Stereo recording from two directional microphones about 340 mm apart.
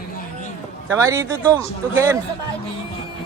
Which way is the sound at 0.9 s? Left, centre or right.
Centre.